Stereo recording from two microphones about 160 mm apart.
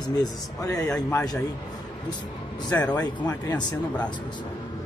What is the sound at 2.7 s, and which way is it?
Speech, 10° left (ahead or behind).